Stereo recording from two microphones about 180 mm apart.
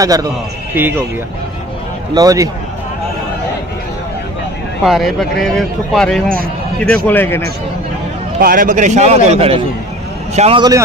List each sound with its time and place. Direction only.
0.0 s a man's voice: 20° right (ahead or behind)
2.1 s a man's voice: 20° right (ahead or behind)
4.8 s speech: centre (ahead or behind)
6.2 s a man's voice: 50° right (ahead or behind)
7.1 s speech: 10° left (ahead or behind)
8.4 s a man's voice: 55° right (ahead or behind); by 10.6 s 35° right (ahead or behind)